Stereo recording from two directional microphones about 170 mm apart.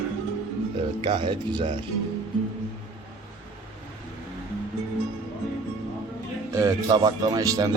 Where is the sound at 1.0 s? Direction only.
30° right (ahead or behind).